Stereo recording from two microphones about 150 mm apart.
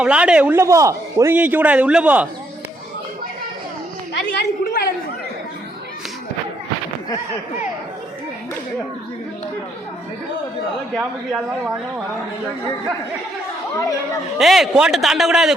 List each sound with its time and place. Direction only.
0.0 s a man's voice: 5° right (ahead or behind)
4.1 s a woman's voice: 90° left
10.9 s a man's voice: centre (ahead or behind)
13.7 s speech: 20° left (ahead or behind)
14.3 s a man's voice: centre (ahead or behind)